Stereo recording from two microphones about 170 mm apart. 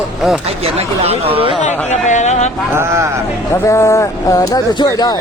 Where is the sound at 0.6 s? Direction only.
35° right (ahead or behind).